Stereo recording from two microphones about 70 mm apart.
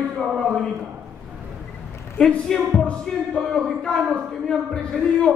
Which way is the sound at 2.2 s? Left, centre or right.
Centre.